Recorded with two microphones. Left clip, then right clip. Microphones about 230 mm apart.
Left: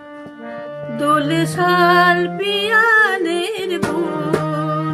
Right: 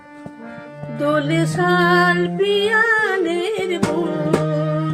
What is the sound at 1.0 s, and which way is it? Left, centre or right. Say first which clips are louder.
Music: left 2 dB; left.